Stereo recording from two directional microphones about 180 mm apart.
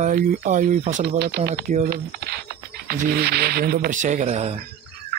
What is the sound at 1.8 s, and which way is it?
Speech, 60° right (ahead or behind).